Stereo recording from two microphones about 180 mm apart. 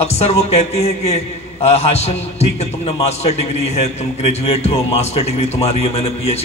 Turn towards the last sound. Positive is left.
turn(degrees=35)  # may be behind; listen again after turning